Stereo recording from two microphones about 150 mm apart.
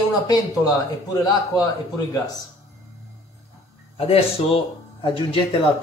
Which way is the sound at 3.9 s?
40° left (ahead or behind).